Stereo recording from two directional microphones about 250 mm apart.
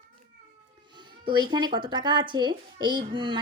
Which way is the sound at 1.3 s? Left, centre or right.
Centre.